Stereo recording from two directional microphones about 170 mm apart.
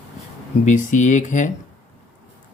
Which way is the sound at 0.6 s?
45° left (ahead or behind).